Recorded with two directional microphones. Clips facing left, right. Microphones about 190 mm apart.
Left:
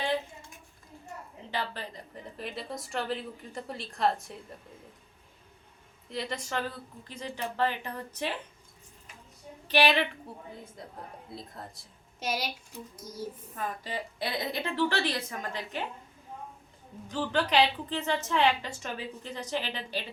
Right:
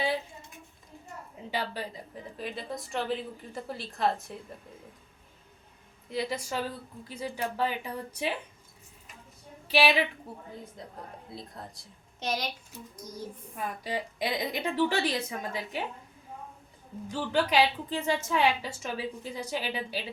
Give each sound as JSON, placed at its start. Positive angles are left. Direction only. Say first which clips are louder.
{"t": 1.5, "sound": "speech", "louder": "right 2 dB", "side_deg": -10}
{"t": 6.1, "sound": "a woman's voice", "louder": "right 3 dB", "side_deg": 0}
{"t": 9.6, "sound": "a woman's voice", "louder": "even", "side_deg": -10}
{"t": 13.6, "sound": "a woman's voice", "louder": "right 2 dB", "side_deg": -15}
{"t": 17.1, "sound": "a woman's voice", "louder": "right 1 dB", "side_deg": -10}